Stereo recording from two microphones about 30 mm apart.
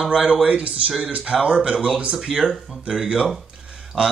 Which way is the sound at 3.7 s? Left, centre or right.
Right.